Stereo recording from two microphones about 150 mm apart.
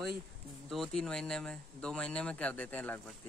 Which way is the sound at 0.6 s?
5° left (ahead or behind).